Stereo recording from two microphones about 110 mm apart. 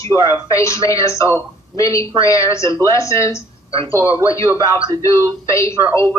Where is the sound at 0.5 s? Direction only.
25° left (ahead or behind).